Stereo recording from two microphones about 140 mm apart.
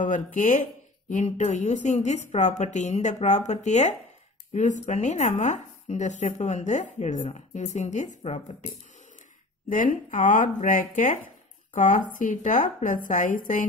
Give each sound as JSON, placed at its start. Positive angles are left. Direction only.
{"t": 0.0, "sound": "speech", "side_deg": 65}
{"t": 9.7, "sound": "speech", "side_deg": 70}